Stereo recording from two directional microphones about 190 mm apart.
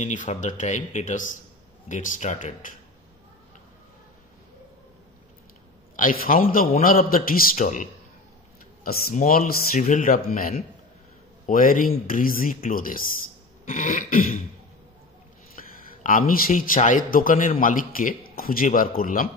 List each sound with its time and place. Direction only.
0.0 s a man's voice: 40° left (ahead or behind)
5.9 s a man's voice: 45° left (ahead or behind)
15.5 s a man's voice: 45° left (ahead or behind)